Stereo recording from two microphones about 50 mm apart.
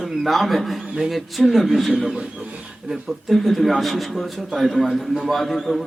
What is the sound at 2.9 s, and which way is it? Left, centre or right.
A man's voice, centre.